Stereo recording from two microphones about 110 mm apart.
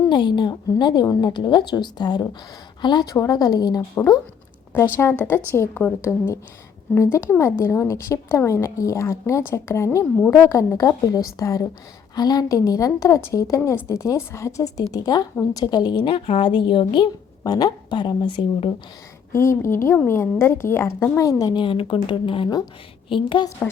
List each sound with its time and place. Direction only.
0.1 s a woman's voice: 45° left (ahead or behind)
4.9 s a woman's voice: 20° left (ahead or behind); by 16.0 s 40° left (ahead or behind)
16.0 s speech: 60° left (ahead or behind)
16.5 s a woman's voice: 45° left (ahead or behind)
19.3 s a woman's voice: 25° left (ahead or behind)
21.6 s a woman's voice: 50° left (ahead or behind)